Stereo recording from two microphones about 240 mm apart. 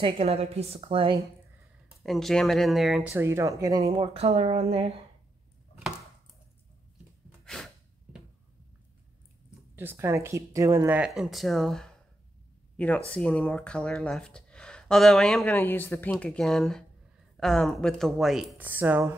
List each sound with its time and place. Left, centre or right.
0.0 s a woman's voice: right
2.0 s speech: centre; by 5.0 s right
7.4 s gasp: centre
9.8 s speech: centre